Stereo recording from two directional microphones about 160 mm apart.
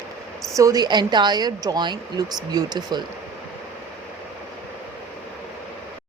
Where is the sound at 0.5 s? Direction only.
20° right (ahead or behind).